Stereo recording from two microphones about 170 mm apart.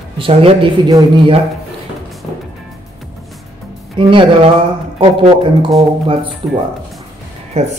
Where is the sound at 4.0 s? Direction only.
30° right (ahead or behind).